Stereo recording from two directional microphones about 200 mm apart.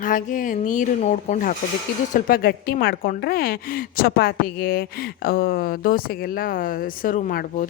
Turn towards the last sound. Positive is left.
turn(degrees=45)  # may be behind; listen again after turning